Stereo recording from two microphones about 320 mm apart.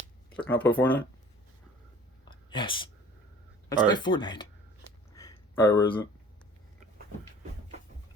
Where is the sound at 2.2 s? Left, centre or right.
Centre.